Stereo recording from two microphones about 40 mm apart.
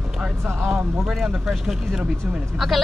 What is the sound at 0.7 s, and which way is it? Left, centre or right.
A woman's voice, centre.